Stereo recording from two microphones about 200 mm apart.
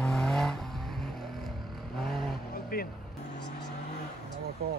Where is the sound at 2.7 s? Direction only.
50° left (ahead or behind).